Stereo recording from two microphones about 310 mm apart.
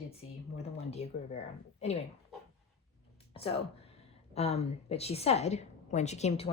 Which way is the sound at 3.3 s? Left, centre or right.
Centre.